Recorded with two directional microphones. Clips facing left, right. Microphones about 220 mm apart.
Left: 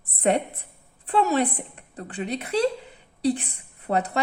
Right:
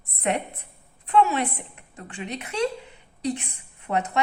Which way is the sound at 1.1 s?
35° left (ahead or behind).